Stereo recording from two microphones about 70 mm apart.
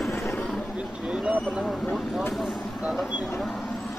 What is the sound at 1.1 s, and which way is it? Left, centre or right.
Speech, centre.